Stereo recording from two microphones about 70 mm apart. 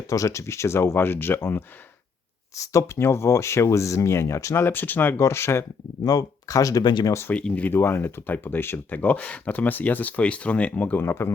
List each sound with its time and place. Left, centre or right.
0.1 s speech: left
2.6 s speech: left
4.6 s speech: left
6.1 s speech: left
7.4 s speech: centre
7.7 s speech: left
11.0 s speech: left